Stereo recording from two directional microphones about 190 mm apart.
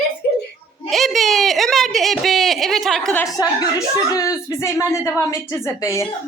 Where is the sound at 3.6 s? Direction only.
20° left (ahead or behind).